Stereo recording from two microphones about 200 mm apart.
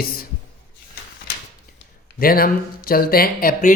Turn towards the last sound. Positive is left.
turn(degrees=45)  # may be behind; listen again after turning